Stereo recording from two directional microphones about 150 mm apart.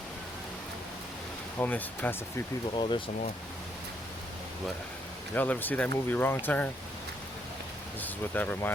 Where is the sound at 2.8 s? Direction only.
35° left (ahead or behind).